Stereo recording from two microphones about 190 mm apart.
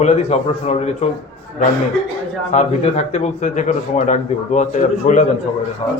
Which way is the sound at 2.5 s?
35° left (ahead or behind).